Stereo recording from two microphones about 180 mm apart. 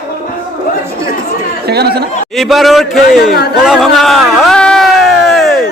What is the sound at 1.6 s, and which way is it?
Speech, 65° right (ahead or behind).